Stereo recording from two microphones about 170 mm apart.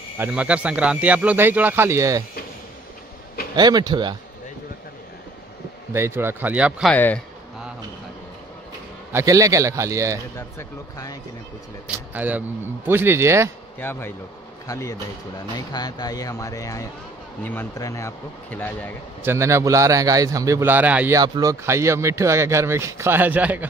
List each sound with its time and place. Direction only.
0.2 s speech: 5° right (ahead or behind)
3.5 s speech: 25° right (ahead or behind)
5.9 s speech: 15° right (ahead or behind)
6.9 s speech: 10° left (ahead or behind)
9.1 s speech: 20° right (ahead or behind)
10.3 s speech: 20° left (ahead or behind)
12.1 s speech: 10° right (ahead or behind)
13.7 s speech: 10° left (ahead or behind)
19.2 s speech: 15° right (ahead or behind)
21.2 s speech: 20° right (ahead or behind)